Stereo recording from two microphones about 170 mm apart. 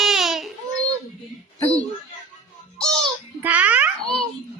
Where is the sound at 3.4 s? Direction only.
10° right (ahead or behind).